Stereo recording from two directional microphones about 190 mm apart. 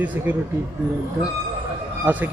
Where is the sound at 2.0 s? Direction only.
10° right (ahead or behind).